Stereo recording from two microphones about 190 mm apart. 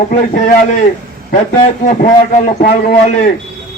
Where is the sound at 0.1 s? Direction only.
45° left (ahead or behind).